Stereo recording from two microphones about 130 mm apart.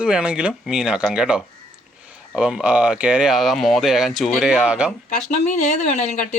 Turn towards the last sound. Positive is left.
turn(degrees=65)  # may be behind; listen again after turning